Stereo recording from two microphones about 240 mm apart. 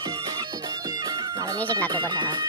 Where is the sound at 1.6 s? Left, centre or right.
Centre.